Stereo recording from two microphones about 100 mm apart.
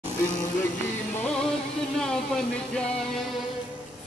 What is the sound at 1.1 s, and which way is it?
Music, 10° left (ahead or behind).